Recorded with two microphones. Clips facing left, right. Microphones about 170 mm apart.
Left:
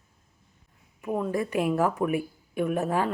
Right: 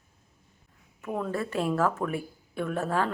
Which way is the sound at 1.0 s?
15° left (ahead or behind).